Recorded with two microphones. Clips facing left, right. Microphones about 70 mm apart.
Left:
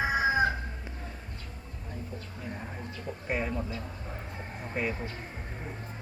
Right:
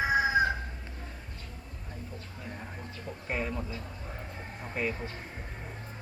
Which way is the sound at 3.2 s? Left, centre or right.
Centre.